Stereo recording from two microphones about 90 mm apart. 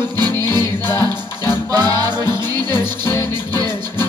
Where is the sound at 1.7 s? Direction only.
45° right (ahead or behind).